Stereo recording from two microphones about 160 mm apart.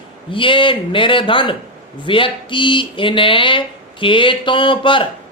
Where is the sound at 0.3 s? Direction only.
30° left (ahead or behind).